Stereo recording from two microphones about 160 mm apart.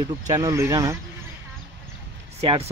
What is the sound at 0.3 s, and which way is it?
Speech, 20° right (ahead or behind).